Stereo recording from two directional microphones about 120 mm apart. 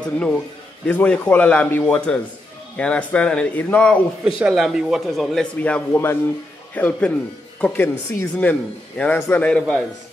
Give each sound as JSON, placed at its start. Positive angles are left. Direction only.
{"t": 0.0, "sound": "speech", "side_deg": 5}
{"t": 4.5, "sound": "speech", "side_deg": 0}
{"t": 5.6, "sound": "speech", "side_deg": 15}